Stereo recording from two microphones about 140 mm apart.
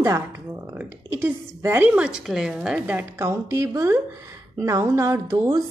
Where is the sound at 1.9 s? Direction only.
5° right (ahead or behind).